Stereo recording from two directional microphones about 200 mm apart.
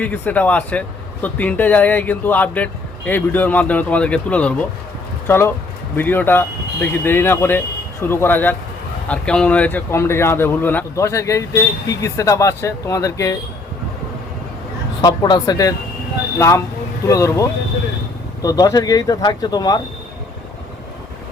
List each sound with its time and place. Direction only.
0.0 s speech: 5° left (ahead or behind)
15.0 s speech: 20° left (ahead or behind)
17.1 s speech: 15° left (ahead or behind)